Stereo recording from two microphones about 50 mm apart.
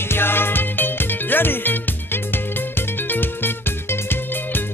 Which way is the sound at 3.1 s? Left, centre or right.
Left.